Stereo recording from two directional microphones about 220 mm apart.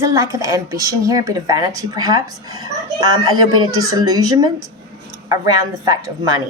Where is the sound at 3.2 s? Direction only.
75° right (ahead or behind).